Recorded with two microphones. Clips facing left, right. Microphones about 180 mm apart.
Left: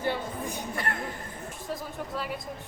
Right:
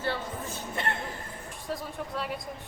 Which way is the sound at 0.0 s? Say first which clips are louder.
Left 2 dB; 15° left (ahead or behind).